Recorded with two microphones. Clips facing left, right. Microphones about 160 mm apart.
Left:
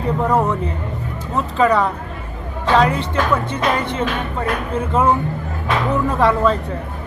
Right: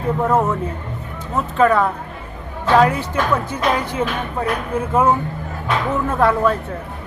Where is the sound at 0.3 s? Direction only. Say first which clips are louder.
Even; 5° right (ahead or behind).